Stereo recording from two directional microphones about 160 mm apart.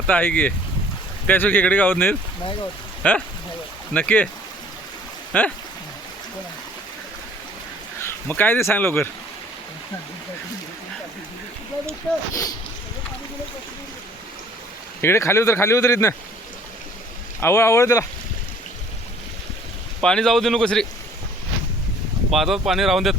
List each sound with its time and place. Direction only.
0.1 s speech: 10° left (ahead or behind)
5.3 s speech: 10° left (ahead or behind)
8.0 s speech: 10° left (ahead or behind)
12.3 s speech: 20° left (ahead or behind)
15.0 s speech: 15° left (ahead or behind)
17.4 s speech: 15° left (ahead or behind)
20.0 s speech: 5° left (ahead or behind)
22.3 s speech: centre (ahead or behind)